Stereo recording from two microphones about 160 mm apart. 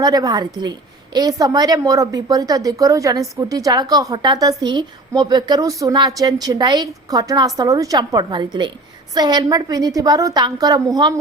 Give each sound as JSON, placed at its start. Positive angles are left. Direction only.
{"t": 0.0, "sound": "a woman's voice", "side_deg": -25}